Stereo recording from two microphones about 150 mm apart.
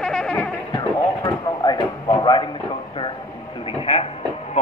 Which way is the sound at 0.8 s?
25° left (ahead or behind).